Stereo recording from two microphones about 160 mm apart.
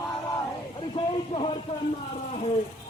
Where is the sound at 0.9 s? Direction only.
35° left (ahead or behind).